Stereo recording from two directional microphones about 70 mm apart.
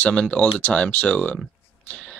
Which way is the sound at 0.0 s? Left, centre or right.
Centre.